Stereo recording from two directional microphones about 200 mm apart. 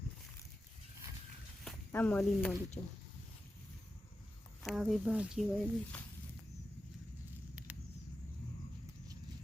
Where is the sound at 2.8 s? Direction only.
30° left (ahead or behind).